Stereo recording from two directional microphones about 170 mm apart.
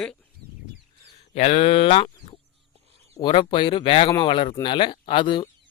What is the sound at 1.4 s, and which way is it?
Speech, 35° left (ahead or behind).